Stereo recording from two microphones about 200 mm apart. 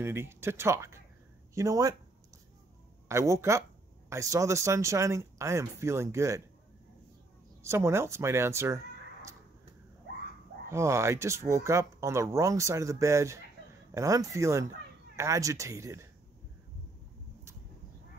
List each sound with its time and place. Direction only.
0.0 s speech: 10° right (ahead or behind)
3.1 s speech: 15° right (ahead or behind)
7.6 s speech: 15° right (ahead or behind)
10.7 s speech: 15° right (ahead or behind)